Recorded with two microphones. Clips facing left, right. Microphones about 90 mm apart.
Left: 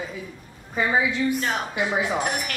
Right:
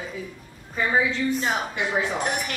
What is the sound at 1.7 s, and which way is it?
Speech, 10° left (ahead or behind).